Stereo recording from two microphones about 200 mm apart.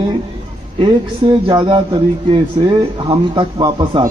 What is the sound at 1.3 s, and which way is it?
Speech, 25° right (ahead or behind).